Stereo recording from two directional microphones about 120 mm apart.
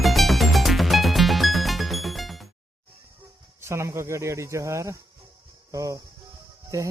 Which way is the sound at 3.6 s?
25° right (ahead or behind).